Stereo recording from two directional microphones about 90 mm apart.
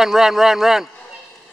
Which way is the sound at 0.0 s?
5° right (ahead or behind).